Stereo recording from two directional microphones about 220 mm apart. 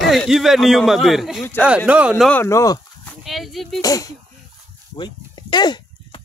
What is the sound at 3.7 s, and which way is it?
Speech, 15° left (ahead or behind).